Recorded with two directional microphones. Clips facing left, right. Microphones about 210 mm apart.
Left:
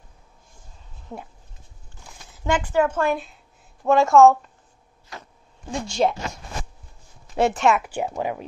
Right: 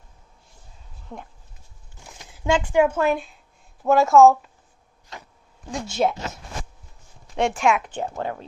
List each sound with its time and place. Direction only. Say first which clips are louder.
1.1 s speech: left 2 dB; 10° left (ahead or behind)
2.3 s a woman's voice: right 2 dB; 10° right (ahead or behind)
5.7 s a woman's voice: left 1 dB; centre (ahead or behind)